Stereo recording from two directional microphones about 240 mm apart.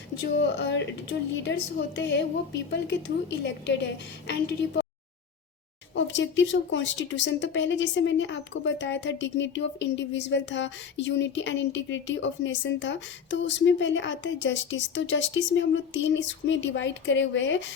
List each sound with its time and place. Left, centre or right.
0.2 s speech: left
2.0 s speech: left
5.9 s speech: left